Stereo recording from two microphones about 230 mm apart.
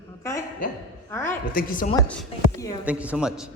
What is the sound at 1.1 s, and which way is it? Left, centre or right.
Speech, centre.